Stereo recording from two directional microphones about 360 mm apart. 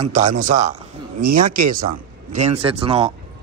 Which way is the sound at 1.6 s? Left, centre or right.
Right.